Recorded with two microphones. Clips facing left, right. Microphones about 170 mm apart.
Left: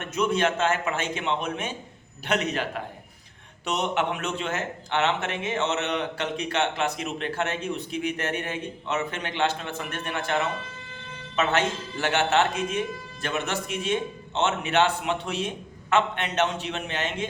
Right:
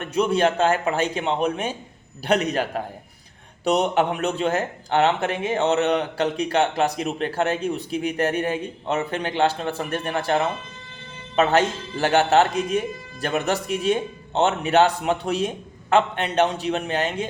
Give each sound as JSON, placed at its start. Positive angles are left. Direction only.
{"t": 0.0, "sound": "speech", "side_deg": -35}